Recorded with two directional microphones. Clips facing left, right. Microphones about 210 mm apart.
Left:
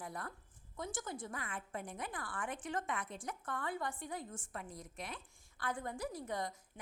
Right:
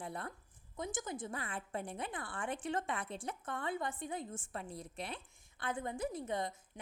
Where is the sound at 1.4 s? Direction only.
30° right (ahead or behind).